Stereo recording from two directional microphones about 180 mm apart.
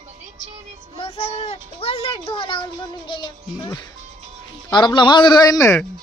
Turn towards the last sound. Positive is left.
turn(degrees=20)  # may be behind; listen again after turning